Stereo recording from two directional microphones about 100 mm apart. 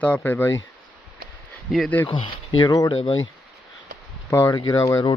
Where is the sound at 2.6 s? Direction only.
40° left (ahead or behind).